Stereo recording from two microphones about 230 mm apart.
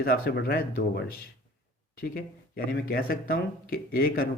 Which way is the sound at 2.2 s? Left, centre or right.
Left.